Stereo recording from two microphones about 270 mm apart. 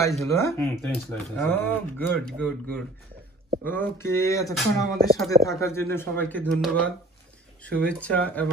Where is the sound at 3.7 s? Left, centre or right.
Centre.